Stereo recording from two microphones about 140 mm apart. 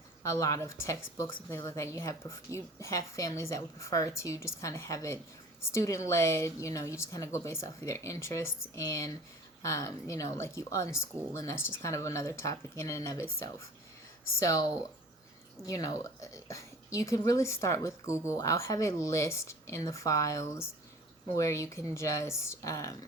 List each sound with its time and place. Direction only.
0.2 s a woman's voice: 25° left (ahead or behind)